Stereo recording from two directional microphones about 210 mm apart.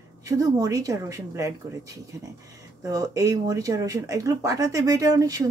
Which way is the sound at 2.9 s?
15° right (ahead or behind).